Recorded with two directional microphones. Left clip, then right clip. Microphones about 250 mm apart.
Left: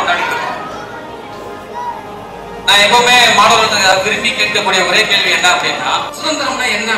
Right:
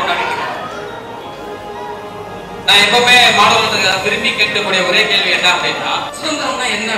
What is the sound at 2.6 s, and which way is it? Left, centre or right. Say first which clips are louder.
A man's voice: left 1 dB; centre.